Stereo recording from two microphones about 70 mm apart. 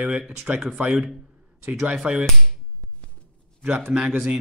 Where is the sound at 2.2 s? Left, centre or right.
Centre.